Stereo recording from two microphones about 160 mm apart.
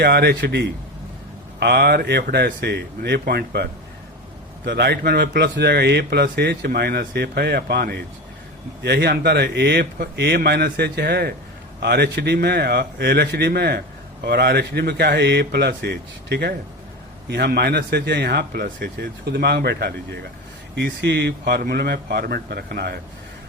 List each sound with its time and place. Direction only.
0.0 s speech: 90° right
6.2 s speech: 80° right
11.8 s speech: 90° right